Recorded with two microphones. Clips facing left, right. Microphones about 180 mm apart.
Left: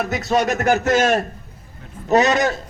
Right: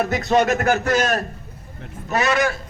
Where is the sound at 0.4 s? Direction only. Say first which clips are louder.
Left 1 dB; 15° left (ahead or behind).